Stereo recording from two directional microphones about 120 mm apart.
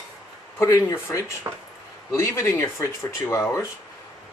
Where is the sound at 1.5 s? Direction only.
30° right (ahead or behind).